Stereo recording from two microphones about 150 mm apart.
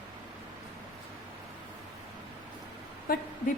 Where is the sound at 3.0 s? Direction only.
80° left.